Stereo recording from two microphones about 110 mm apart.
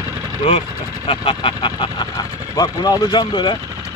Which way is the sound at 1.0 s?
55° left (ahead or behind).